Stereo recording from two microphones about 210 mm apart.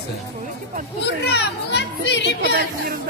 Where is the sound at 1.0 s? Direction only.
55° left (ahead or behind).